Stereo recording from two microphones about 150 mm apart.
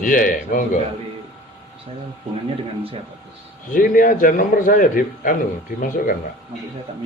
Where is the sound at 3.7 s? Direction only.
65° left (ahead or behind).